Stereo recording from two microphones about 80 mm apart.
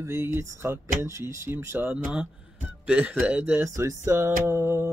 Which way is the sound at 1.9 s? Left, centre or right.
Centre.